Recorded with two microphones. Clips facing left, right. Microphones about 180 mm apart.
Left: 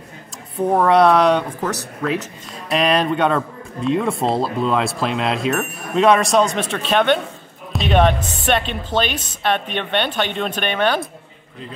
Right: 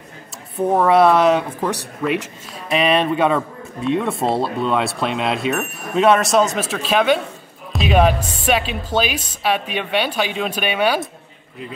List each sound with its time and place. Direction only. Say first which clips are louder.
0.6 s speech: even; 5° right (ahead or behind)
2.7 s speech: even; centre (ahead or behind)